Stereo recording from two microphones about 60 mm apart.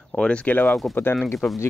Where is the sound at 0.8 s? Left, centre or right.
Centre.